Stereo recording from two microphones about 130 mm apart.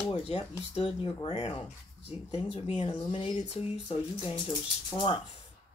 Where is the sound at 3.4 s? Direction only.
60° left (ahead or behind).